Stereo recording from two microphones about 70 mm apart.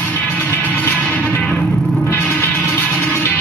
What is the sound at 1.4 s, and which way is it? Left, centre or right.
Music, centre.